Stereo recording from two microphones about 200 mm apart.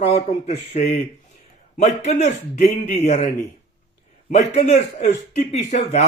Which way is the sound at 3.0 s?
35° left (ahead or behind).